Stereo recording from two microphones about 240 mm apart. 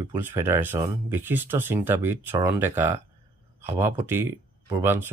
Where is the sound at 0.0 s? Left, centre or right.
Centre.